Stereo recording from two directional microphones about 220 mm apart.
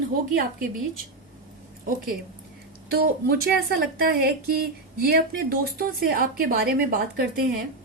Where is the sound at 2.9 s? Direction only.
45° right (ahead or behind).